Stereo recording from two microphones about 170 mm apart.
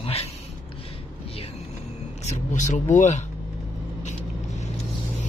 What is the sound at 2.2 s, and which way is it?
Speech, 45° left (ahead or behind).